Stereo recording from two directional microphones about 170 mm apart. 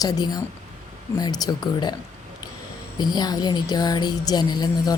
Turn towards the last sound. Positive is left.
turn(degrees=25)  # may be behind; listen again after turning